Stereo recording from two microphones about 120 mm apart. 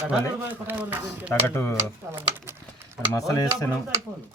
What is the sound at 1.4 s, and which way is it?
Speech, 20° left (ahead or behind).